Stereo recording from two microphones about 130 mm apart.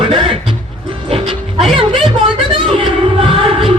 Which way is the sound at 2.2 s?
40° right (ahead or behind).